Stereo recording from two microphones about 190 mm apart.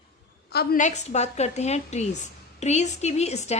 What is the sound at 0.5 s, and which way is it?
A woman's voice, 45° left (ahead or behind).